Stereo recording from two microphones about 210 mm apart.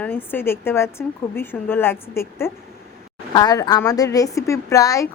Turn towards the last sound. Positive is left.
turn(degrees=15)  # may be behind; listen again after turning